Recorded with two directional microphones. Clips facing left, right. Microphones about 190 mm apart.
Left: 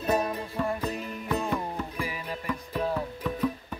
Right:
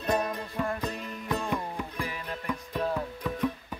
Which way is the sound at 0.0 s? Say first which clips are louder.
Left 2 dB; 5° left (ahead or behind).